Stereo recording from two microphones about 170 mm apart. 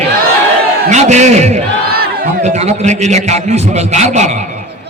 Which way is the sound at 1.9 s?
60° right (ahead or behind).